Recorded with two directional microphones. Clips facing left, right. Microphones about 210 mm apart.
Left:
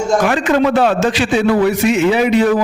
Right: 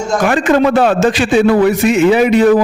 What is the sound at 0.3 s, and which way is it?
A man's voice, 50° right (ahead or behind).